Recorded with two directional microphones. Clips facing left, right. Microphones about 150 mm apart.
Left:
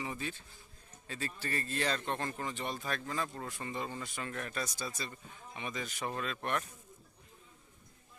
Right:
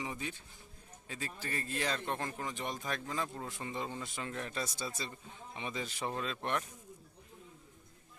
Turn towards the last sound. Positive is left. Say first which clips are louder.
# even
turn(degrees=-20)  # may be behind; listen again after turning